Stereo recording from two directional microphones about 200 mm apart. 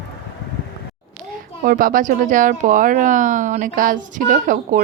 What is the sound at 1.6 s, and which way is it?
Speech, 45° right (ahead or behind).